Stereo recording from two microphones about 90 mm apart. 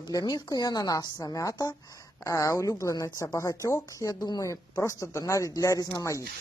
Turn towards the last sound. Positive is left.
turn(degrees=35)  # may be behind; listen again after turning